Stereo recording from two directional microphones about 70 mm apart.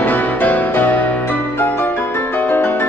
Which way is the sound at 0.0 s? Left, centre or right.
Left.